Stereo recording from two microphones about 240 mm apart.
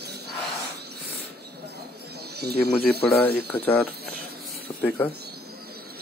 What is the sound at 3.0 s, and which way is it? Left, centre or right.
Speech, centre.